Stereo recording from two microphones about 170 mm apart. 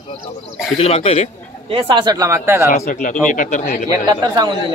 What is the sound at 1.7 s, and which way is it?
Speech, 30° right (ahead or behind).